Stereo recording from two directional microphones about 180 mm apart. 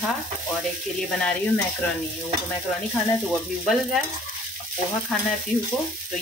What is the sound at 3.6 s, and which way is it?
Speech, centre (ahead or behind).